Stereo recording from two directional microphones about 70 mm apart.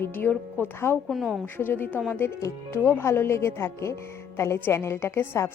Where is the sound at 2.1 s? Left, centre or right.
Left.